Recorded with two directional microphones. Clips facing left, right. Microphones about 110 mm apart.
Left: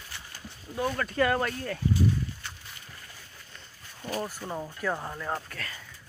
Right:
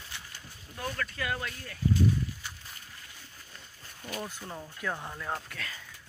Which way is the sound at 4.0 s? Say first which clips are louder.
Left 5 dB; 30° left (ahead or behind).